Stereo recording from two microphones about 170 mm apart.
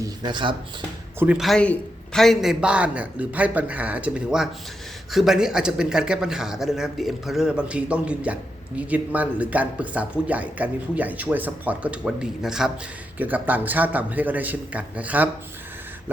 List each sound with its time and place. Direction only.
0.0 s speech: 25° right (ahead or behind)
1.2 s a man's voice: 5° right (ahead or behind)